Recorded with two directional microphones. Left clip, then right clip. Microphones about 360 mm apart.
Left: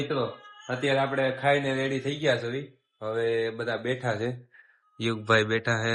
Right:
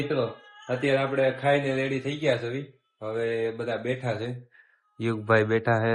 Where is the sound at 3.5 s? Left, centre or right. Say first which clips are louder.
Even; centre.